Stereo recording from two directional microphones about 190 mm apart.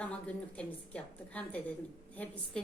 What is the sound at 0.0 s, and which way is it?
A woman's voice, 5° left (ahead or behind).